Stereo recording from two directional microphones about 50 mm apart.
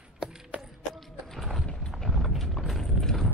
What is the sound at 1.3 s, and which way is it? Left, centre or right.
Clip-clop, centre.